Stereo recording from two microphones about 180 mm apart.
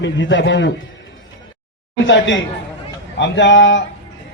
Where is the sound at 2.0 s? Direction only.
90° left.